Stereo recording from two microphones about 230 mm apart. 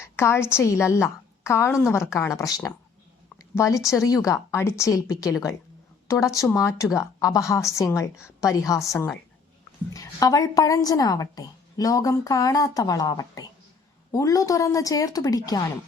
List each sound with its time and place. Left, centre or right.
0.2 s a woman's voice: centre